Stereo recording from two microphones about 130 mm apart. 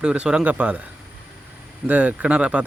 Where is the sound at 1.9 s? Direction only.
10° right (ahead or behind).